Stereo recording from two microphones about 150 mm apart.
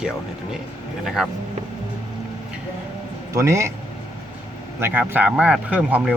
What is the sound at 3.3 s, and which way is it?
Speech, 20° right (ahead or behind).